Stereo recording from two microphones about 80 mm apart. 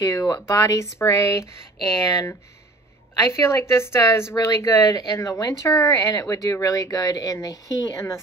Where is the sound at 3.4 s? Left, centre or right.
Left.